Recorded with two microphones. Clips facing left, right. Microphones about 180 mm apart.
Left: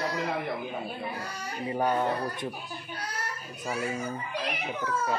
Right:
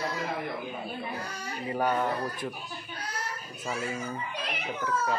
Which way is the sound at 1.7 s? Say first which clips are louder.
Left 1 dB; 15° left (ahead or behind).